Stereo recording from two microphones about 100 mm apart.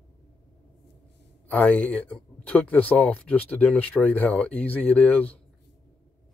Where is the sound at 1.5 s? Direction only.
15° left (ahead or behind).